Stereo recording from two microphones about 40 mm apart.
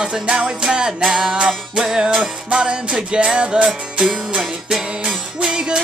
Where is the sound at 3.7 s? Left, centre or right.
Centre.